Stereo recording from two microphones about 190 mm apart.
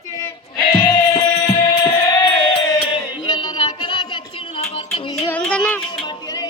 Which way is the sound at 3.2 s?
25° left (ahead or behind).